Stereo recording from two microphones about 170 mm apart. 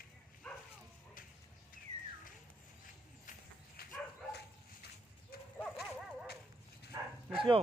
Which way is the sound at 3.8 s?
65° left (ahead or behind).